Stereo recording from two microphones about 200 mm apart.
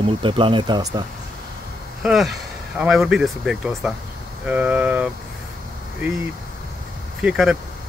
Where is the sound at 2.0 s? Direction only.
Centre (ahead or behind).